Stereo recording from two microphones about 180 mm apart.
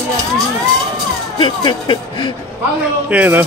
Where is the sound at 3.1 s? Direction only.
10° right (ahead or behind).